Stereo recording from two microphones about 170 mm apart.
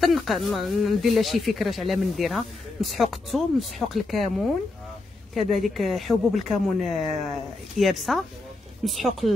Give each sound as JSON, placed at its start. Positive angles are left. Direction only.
{"t": 0.0, "sound": "speech", "side_deg": 0}
{"t": 5.3, "sound": "speech", "side_deg": 0}